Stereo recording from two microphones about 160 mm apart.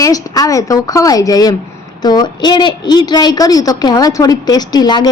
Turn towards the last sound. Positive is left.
turn(degrees=25)  # may be behind; listen again after turning